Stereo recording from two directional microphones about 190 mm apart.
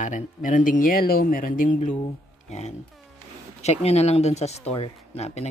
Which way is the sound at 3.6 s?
35° left (ahead or behind).